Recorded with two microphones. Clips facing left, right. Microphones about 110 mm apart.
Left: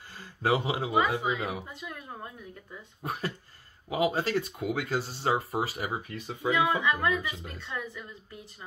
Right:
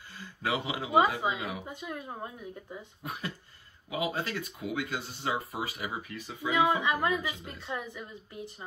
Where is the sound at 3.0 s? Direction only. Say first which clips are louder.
Left 6 dB; 35° left (ahead or behind).